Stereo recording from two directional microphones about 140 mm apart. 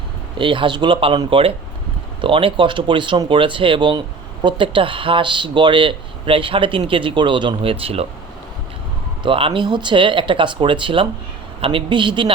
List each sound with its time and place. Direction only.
0.3 s speech: 35° right (ahead or behind)
9.2 s speech: 40° right (ahead or behind)